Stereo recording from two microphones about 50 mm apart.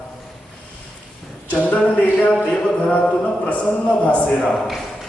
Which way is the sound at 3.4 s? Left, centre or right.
Left.